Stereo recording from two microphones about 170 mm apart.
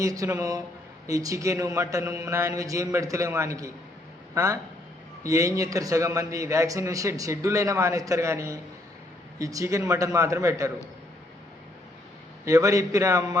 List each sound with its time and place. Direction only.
0.0 s a man's voice: 20° right (ahead or behind)
12.5 s a man's voice: 20° right (ahead or behind)